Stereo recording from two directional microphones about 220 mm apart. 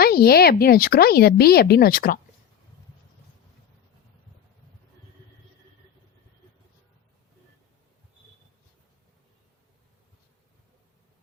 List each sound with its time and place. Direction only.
0.0 s speech: 45° left (ahead or behind)